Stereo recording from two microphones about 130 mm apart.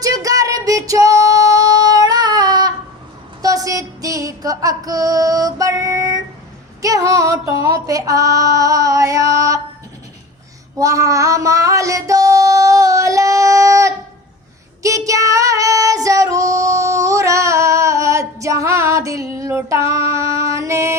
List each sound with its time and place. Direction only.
0.0 s female singing: 25° right (ahead or behind)
6.8 s a sound: 25° right (ahead or behind)
7.6 s female singing: 25° right (ahead or behind)
10.8 s child singing: 25° right (ahead or behind)
14.8 s female singing: 25° right (ahead or behind)